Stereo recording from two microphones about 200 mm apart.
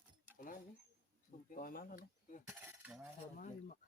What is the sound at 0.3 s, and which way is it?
Speech, 40° left (ahead or behind).